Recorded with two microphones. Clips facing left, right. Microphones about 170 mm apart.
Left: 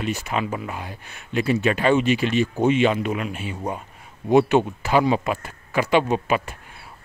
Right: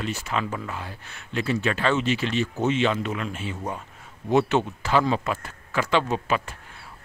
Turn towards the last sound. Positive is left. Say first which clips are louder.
# left 4 dB
turn(degrees=15)  # may be behind; listen again after turning